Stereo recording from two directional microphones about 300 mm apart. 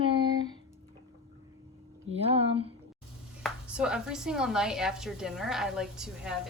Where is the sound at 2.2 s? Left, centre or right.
Centre.